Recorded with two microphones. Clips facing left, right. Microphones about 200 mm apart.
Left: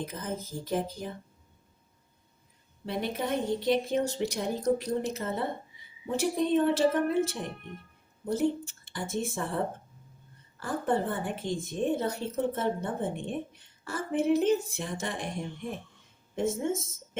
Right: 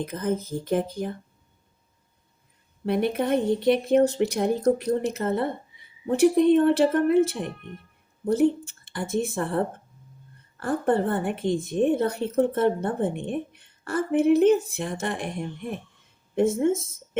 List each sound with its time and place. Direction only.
0.0 s a woman's voice: 60° right (ahead or behind)
2.8 s a woman's voice: 60° right (ahead or behind)
8.3 s a woman's voice: 60° right (ahead or behind)
10.6 s a woman's voice: 60° right (ahead or behind)
16.3 s a woman's voice: 60° right (ahead or behind)